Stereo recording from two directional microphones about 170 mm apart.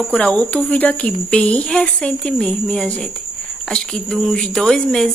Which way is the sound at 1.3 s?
5° left (ahead or behind).